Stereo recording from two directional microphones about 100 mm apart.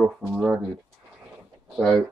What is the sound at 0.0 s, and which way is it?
Speech, 5° right (ahead or behind).